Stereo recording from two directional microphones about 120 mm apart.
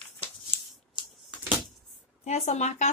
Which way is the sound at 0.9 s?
10° right (ahead or behind).